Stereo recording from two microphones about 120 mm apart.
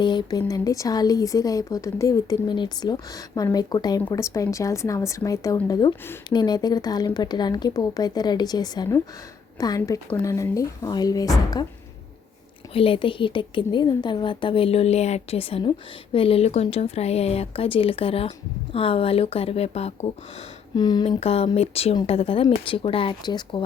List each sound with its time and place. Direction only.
0.0 s a woman's voice: 40° left (ahead or behind)
12.7 s speech: 50° left (ahead or behind)
20.7 s speech: 35° left (ahead or behind)
21.2 s speech: 55° left (ahead or behind); by 23.6 s 40° left (ahead or behind)